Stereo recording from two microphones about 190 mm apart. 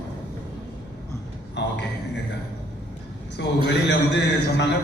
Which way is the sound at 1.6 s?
65° left (ahead or behind).